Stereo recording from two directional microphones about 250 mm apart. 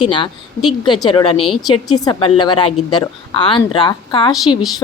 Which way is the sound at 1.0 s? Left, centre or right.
Centre.